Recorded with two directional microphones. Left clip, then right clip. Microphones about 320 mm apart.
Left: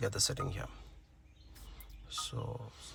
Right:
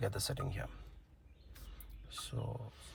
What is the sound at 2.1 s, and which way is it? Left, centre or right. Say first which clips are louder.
Speech: left 5 dB; centre.